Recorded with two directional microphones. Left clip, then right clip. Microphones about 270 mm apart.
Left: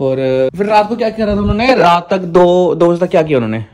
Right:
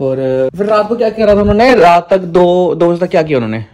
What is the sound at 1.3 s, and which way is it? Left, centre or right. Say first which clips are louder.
Speech: right 7 dB; left.